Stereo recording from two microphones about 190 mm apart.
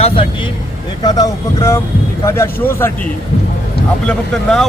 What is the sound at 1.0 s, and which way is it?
Speech, 20° left (ahead or behind).